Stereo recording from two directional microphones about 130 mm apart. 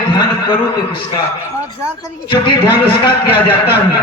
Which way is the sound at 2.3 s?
40° left (ahead or behind).